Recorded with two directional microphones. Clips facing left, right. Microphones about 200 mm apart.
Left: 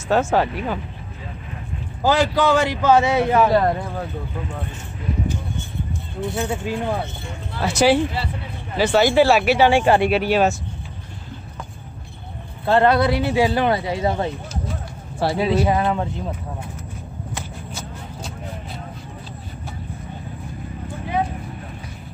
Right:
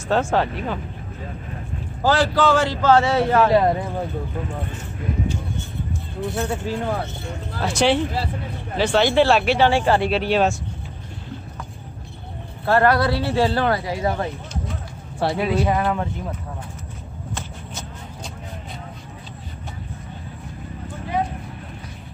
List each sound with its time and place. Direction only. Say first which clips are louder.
0.1 s a man's voice: left 2 dB; 5° left (ahead or behind)
2.0 s a man's voice: left 1 dB; 15° left (ahead or behind)
3.5 s speech: right 1 dB; 10° right (ahead or behind)
6.3 s a man's voice: left 1 dB; 15° left (ahead or behind)
8.1 s speech: right 1 dB; 45° right (ahead or behind)
8.7 s a man's voice: left 2 dB; 5° left (ahead or behind)
12.6 s speech: left 1 dB; 20° left (ahead or behind)
15.1 s speech: left 1 dB; 5° left (ahead or behind)
15.7 s speech: left 1 dB; 20° left (ahead or behind)
17.3 s shuffle: even; 10° left (ahead or behind)